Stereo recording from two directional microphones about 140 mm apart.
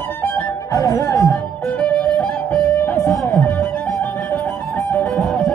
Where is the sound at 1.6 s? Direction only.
10° left (ahead or behind).